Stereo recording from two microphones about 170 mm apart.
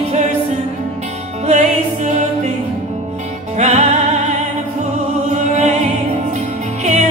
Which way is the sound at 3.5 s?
40° right (ahead or behind).